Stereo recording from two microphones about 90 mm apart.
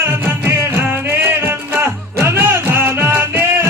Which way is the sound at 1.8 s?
25° right (ahead or behind).